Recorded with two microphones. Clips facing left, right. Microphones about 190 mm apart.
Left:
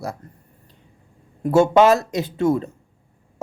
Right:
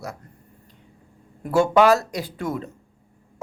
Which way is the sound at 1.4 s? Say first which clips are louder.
Left 3 dB; 25° left (ahead or behind).